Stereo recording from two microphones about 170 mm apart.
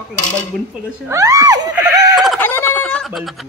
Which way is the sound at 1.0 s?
20° right (ahead or behind).